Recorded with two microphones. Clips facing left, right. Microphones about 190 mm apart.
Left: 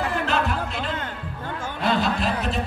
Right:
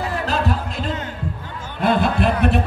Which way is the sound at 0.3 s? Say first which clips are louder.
Right 2 dB; 40° right (ahead or behind).